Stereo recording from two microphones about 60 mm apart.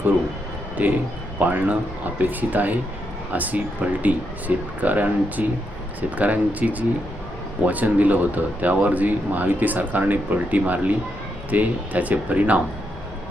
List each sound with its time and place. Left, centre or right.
0.8 s speech: right